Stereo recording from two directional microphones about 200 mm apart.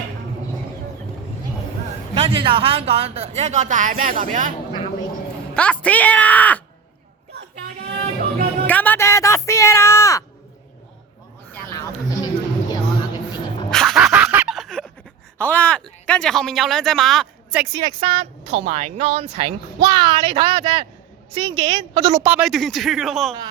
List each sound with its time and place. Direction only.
2.1 s speech: 30° right (ahead or behind)
5.5 s speech: 5° left (ahead or behind)
8.6 s a sound: 10° left (ahead or behind)
11.5 s a sound: 5° left (ahead or behind)
12.2 s a sound: 20° left (ahead or behind)
13.7 s dog: centre (ahead or behind)
15.4 s speech: 10° left (ahead or behind)
17.7 s speech: 20° right (ahead or behind)
18.2 s speech: 30° right (ahead or behind)
22.1 s speech: 10° right (ahead or behind)